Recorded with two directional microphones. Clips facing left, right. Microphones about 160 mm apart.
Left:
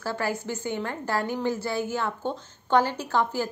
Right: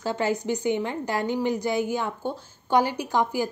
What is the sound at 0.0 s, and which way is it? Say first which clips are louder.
A woman's voice: right 4 dB; 20° right (ahead or behind).